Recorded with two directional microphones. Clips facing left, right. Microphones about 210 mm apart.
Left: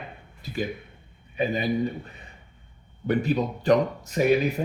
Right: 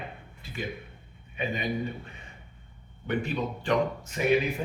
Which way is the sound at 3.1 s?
40° left (ahead or behind).